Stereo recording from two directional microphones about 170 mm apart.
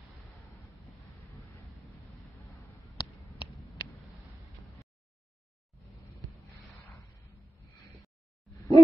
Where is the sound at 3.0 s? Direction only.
25° left (ahead or behind).